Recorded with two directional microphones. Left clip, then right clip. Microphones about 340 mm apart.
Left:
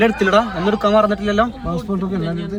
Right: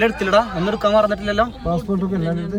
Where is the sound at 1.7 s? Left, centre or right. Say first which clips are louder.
Right 1 dB; centre.